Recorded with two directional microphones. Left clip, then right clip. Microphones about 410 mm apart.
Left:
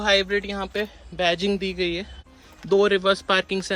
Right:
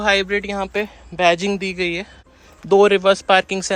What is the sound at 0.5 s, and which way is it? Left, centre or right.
Speech, centre.